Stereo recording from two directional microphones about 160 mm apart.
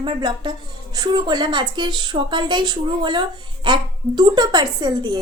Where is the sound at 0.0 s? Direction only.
30° right (ahead or behind).